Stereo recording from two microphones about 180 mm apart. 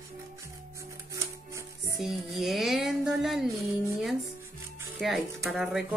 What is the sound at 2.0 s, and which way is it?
Music, centre (ahead or behind).